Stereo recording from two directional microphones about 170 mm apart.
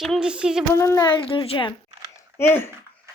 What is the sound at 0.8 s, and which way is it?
Speech, 15° left (ahead or behind).